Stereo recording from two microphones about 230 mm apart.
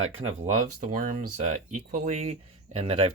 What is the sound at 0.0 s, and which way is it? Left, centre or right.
Speech, right.